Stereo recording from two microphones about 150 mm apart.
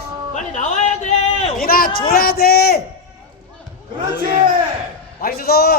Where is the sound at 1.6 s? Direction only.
80° left.